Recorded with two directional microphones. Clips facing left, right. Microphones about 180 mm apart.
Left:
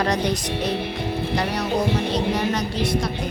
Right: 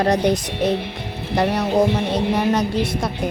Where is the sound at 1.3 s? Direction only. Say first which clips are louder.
Right 7 dB; 55° right (ahead or behind).